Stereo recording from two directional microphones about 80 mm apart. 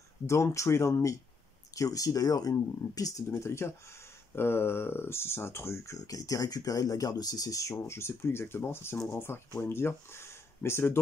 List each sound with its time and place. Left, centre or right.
0.3 s speech: left
5.9 s speech: left